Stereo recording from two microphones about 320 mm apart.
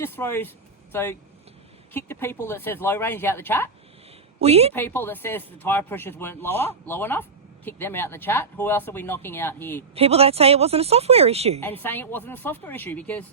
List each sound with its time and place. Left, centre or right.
0.0 s speech: centre
4.4 s speech: centre
4.7 s speech: centre
9.9 s a woman's voice: centre
11.8 s speech: centre